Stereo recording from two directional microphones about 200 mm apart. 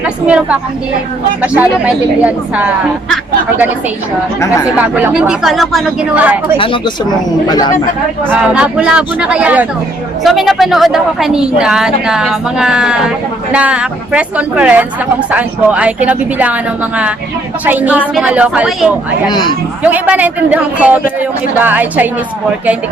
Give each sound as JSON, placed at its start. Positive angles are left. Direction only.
{"t": 0.0, "sound": "a woman's voice", "side_deg": -5}
{"t": 4.9, "sound": "a woman's voice", "side_deg": -10}
{"t": 6.6, "sound": "speech", "side_deg": 25}
{"t": 8.3, "sound": "a woman's voice", "side_deg": -5}
{"t": 17.7, "sound": "a man's voice", "side_deg": -10}
{"t": 19.3, "sound": "speech", "side_deg": 20}
{"t": 19.8, "sound": "a man's voice", "side_deg": -10}